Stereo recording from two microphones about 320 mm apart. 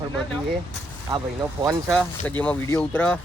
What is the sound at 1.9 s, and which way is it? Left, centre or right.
Speech, centre.